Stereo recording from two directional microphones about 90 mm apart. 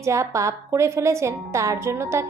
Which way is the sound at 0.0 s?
35° right (ahead or behind).